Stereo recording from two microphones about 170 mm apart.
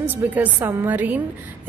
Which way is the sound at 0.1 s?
10° right (ahead or behind).